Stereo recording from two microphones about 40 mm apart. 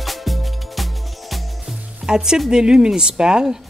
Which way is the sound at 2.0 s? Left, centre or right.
Centre.